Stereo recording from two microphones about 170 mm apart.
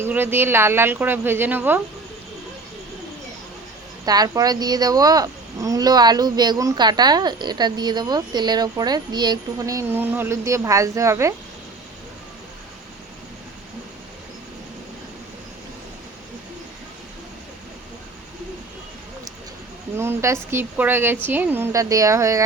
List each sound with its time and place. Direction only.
0.0 s a woman's voice: 10° right (ahead or behind)
4.0 s speech: 20° right (ahead or behind)
20.0 s a woman's voice: 15° right (ahead or behind)